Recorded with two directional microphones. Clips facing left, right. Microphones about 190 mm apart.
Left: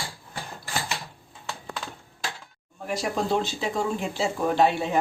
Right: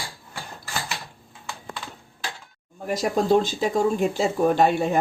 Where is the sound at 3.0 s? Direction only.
45° right (ahead or behind).